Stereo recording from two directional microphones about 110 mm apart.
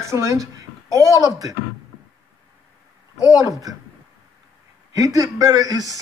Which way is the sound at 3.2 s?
30° left (ahead or behind).